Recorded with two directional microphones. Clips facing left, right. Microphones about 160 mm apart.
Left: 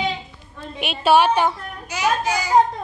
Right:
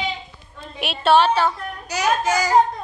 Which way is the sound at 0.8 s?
Centre (ahead or behind).